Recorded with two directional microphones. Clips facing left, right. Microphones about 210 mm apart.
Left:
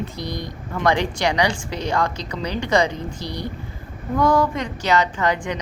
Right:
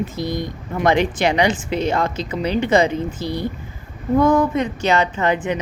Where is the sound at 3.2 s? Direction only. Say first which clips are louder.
Right 4 dB; 50° right (ahead or behind).